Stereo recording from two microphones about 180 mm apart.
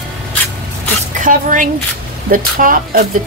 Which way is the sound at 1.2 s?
45° right (ahead or behind).